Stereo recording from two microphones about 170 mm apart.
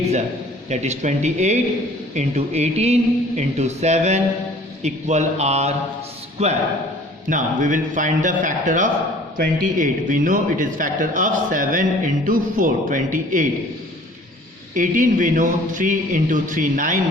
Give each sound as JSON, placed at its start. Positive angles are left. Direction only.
{"t": 0.7, "sound": "a man's voice", "side_deg": -40}
{"t": 14.8, "sound": "a man's voice", "side_deg": -50}